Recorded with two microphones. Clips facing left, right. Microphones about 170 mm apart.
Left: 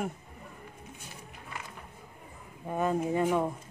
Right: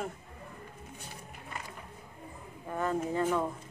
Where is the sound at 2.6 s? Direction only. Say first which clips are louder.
Left 3 dB; 15° left (ahead or behind).